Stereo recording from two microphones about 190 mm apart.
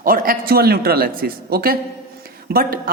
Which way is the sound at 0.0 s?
50° right (ahead or behind).